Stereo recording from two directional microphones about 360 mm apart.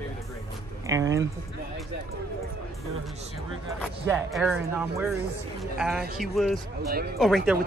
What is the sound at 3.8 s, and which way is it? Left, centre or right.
Speech, centre.